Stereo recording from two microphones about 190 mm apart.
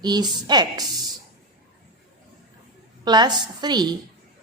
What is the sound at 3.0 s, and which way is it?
Speech, 20° right (ahead or behind).